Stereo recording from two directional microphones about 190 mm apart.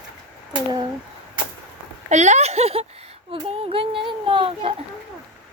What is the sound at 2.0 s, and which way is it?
Speech, 35° right (ahead or behind).